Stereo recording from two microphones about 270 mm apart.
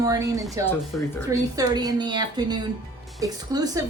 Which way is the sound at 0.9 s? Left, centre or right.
Centre.